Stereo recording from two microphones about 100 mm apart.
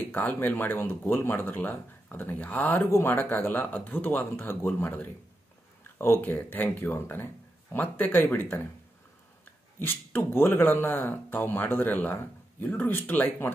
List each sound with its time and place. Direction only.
0.0 s speech: 15° left (ahead or behind)
9.8 s speech: 20° left (ahead or behind)